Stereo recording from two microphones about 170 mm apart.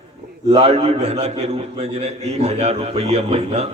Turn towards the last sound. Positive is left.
turn(degrees=-35)  # may be behind; listen again after turning